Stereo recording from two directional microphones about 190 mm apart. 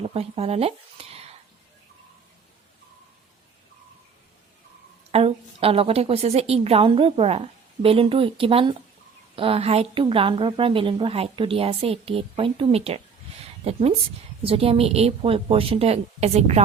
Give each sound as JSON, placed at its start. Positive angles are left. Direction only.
{"t": 0.0, "sound": "speech", "side_deg": -30}
{"t": 5.1, "sound": "a woman's voice", "side_deg": -30}